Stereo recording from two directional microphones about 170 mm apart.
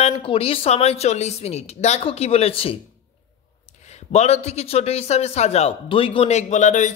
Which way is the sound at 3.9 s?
40° left (ahead or behind).